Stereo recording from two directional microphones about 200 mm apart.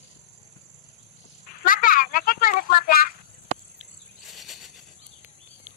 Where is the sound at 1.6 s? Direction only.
45° left (ahead or behind).